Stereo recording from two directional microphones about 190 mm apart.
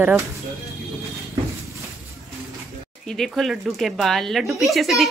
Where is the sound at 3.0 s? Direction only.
Centre (ahead or behind).